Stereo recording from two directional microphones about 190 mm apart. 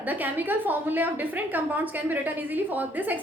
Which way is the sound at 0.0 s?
10° right (ahead or behind).